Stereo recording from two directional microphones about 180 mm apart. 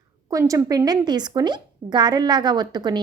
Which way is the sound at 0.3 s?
20° right (ahead or behind).